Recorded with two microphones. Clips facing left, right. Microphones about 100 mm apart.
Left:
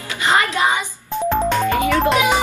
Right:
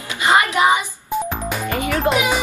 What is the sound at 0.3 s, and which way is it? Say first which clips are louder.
Music: right 2 dB; 20° right (ahead or behind).